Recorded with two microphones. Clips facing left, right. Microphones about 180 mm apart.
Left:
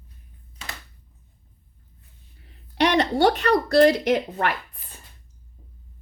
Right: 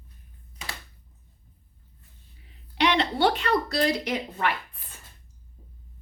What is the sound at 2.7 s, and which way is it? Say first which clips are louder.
Speech: left 4 dB; 45° left (ahead or behind).